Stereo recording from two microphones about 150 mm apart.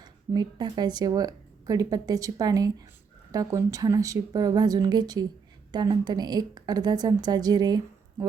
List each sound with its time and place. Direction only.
0.0 s speech: 30° right (ahead or behind)